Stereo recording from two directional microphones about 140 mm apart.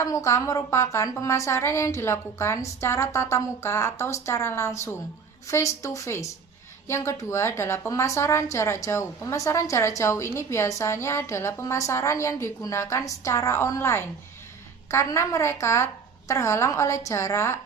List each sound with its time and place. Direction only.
0.0 s a woman's voice: 20° left (ahead or behind)